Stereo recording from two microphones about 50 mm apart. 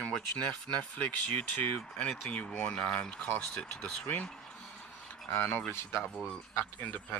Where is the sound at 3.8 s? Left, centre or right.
Left.